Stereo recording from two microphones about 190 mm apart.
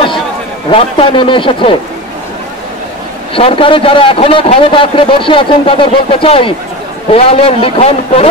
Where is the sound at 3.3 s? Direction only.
30° left (ahead or behind).